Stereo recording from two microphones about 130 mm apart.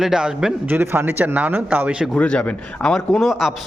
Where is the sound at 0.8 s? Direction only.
15° right (ahead or behind).